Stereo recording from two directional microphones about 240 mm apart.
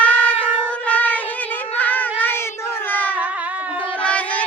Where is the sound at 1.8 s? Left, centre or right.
Centre.